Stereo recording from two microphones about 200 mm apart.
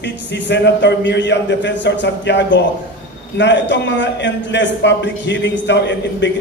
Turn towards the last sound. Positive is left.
turn(degrees=60)  # may be behind; listen again after turning